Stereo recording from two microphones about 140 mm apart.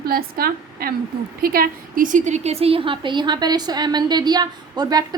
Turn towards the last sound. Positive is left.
turn(degrees=-30)  # may be behind; listen again after turning